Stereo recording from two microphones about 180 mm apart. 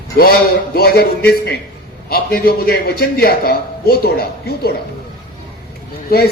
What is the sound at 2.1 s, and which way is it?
A man's voice, 55° left (ahead or behind).